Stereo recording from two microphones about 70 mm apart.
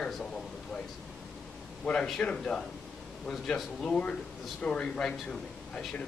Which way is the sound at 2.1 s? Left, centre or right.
Centre.